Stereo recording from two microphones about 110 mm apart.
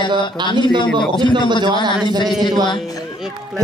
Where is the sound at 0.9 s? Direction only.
5° left (ahead or behind).